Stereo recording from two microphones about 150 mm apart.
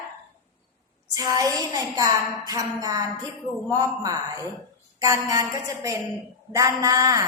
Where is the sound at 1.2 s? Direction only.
25° right (ahead or behind).